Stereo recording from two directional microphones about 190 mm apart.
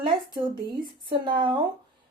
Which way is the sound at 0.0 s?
25° right (ahead or behind).